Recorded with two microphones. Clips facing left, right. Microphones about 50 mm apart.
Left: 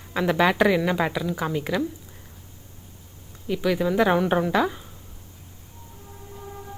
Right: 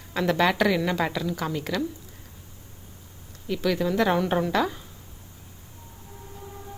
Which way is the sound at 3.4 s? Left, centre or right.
Centre.